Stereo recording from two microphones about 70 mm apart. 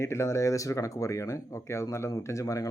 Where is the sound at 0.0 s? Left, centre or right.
Left.